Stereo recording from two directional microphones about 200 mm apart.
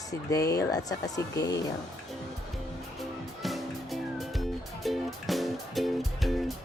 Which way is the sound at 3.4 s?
Centre (ahead or behind).